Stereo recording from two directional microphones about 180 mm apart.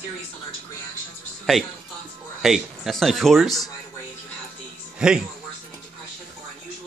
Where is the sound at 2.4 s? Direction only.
Centre (ahead or behind).